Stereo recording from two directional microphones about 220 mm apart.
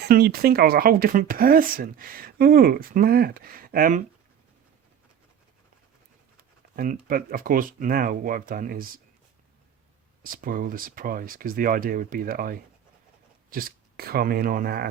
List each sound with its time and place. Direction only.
0.0 s speech: 45° right (ahead or behind)
6.7 s speech: 40° right (ahead or behind)
10.2 s speech: 40° right (ahead or behind)